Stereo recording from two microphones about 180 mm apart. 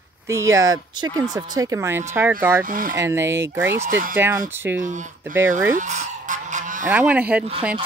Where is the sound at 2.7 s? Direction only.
50° right (ahead or behind).